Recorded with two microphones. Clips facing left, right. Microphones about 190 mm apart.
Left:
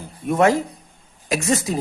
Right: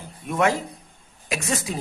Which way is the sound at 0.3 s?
40° left (ahead or behind).